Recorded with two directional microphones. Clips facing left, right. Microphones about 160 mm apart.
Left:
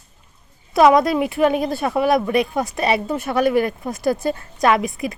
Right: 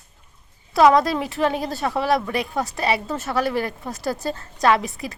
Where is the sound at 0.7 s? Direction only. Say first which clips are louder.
Left 2 dB; 15° left (ahead or behind).